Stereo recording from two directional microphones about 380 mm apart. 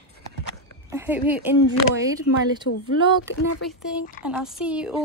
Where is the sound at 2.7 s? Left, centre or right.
Left.